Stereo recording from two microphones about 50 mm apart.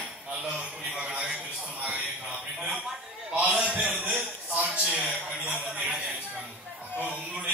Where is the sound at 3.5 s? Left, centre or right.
Centre.